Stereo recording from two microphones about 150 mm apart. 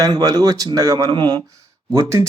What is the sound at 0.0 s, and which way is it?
Speech, 25° right (ahead or behind).